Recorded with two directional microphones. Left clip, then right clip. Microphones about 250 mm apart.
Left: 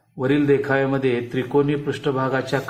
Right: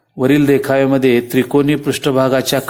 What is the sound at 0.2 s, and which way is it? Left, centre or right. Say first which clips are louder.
A man's voice: right 6 dB; right.